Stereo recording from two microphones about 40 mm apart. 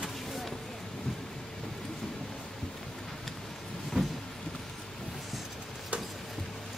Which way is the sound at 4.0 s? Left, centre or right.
Centre.